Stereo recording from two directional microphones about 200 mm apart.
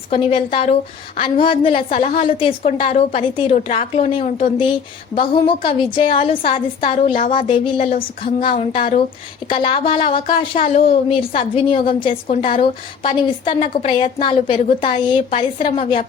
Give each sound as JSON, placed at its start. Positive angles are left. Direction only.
{"t": 0.1, "sound": "a woman's voice", "side_deg": 25}
{"t": 8.2, "sound": "a woman's voice", "side_deg": 30}